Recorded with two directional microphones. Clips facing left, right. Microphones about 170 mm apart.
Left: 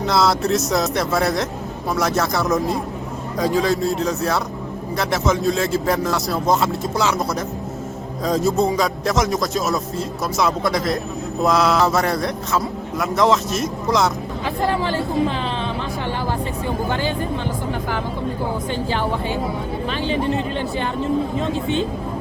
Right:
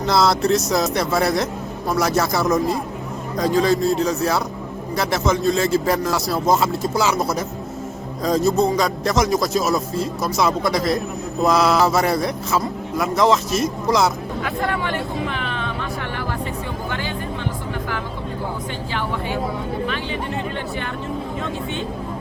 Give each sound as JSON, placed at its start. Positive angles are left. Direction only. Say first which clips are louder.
{"t": 0.0, "sound": "a man's voice", "louder": "right 1 dB", "side_deg": 0}
{"t": 14.4, "sound": "speech", "louder": "left 3 dB", "side_deg": 30}
{"t": 15.3, "sound": "music", "louder": "left 2 dB", "side_deg": 30}
{"t": 16.9, "sound": "speech", "louder": "left 4 dB", "side_deg": 35}
{"t": 18.7, "sound": "speech", "louder": "left 4 dB", "side_deg": 35}